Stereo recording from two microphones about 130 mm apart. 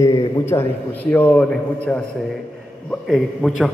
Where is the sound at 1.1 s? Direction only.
10° left (ahead or behind).